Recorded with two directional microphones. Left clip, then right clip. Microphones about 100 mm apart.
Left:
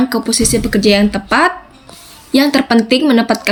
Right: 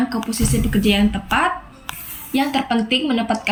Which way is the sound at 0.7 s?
30° left (ahead or behind).